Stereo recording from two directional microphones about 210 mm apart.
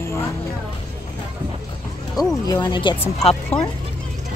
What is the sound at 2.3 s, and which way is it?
Speech, 20° left (ahead or behind).